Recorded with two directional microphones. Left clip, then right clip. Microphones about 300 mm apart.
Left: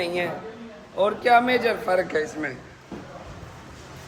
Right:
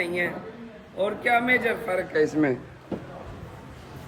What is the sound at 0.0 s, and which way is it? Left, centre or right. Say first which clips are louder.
Speech: left 1 dB; centre.